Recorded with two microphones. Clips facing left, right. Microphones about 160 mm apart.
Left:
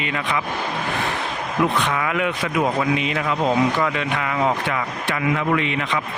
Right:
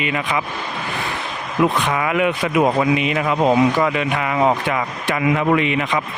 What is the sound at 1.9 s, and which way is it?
Speech, 10° right (ahead or behind).